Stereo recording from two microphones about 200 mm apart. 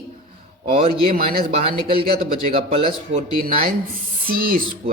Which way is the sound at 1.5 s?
30° right (ahead or behind).